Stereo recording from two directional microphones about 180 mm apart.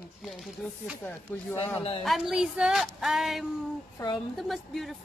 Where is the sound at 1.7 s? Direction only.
30° left (ahead or behind).